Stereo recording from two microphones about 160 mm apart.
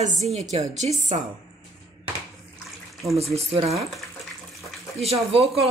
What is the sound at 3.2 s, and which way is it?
Speech, 40° right (ahead or behind).